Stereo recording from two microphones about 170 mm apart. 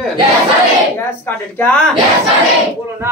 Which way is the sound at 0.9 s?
10° left (ahead or behind).